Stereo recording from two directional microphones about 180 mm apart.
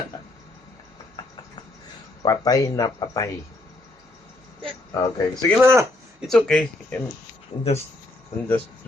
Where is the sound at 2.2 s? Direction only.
20° left (ahead or behind).